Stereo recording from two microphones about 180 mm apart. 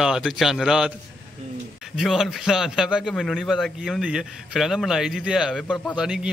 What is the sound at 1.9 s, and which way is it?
A man's voice, centre (ahead or behind).